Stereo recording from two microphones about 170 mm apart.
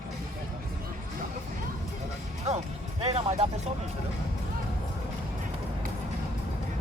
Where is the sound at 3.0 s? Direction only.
35° right (ahead or behind).